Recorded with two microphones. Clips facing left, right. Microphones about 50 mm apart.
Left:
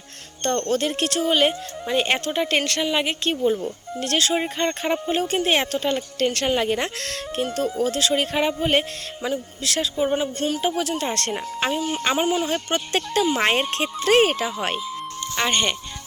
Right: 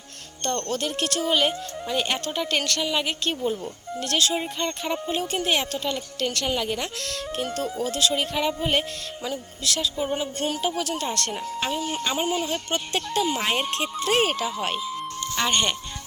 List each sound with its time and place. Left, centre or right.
0.4 s speech: left
4.0 s speech: left
11.8 s speech: centre
12.1 s speech: left
12.5 s speech: left
13.3 s speech: left
14.2 s speech: left
15.2 s music: centre